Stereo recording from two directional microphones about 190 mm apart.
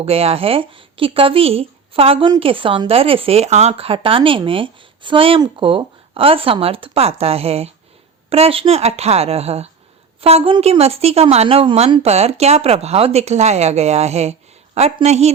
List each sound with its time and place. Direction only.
0.0 s a woman's voice: 30° right (ahead or behind)